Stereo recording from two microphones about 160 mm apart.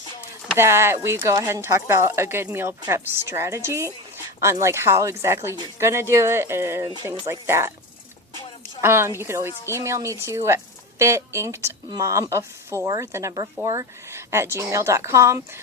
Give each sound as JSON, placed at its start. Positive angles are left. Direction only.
{"t": 0.5, "sound": "speech", "side_deg": -15}
{"t": 8.8, "sound": "a woman's voice", "side_deg": -15}